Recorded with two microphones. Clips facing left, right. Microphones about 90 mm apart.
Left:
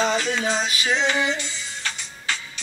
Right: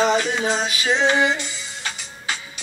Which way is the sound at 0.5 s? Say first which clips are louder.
Right 2 dB; 30° right (ahead or behind).